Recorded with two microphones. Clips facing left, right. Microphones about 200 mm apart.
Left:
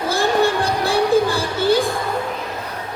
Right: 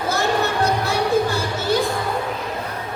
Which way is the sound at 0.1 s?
30° left (ahead or behind).